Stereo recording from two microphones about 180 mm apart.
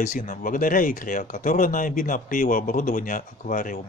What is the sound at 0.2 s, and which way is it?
Speech, 45° left (ahead or behind).